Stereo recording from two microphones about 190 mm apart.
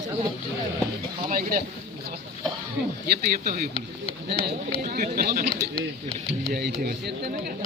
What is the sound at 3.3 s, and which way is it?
Speech, 55° right (ahead or behind).